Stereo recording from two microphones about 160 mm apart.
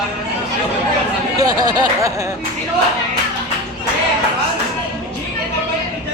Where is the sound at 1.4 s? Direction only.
25° right (ahead or behind).